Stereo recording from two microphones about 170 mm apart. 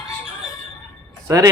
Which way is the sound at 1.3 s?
20° right (ahead or behind).